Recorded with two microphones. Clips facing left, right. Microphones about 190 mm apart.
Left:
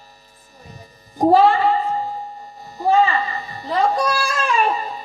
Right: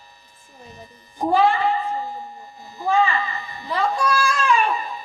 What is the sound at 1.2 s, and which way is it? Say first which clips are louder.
Speech: left 5 dB; 40° left (ahead or behind).